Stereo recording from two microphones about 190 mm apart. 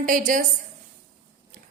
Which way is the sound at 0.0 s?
45° right (ahead or behind).